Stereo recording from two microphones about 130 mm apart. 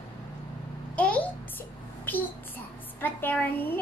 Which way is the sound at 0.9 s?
10° left (ahead or behind).